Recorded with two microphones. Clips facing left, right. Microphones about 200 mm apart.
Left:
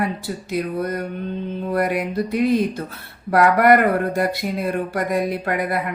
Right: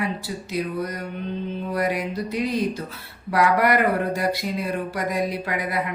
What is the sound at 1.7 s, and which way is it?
Speech, 55° left (ahead or behind).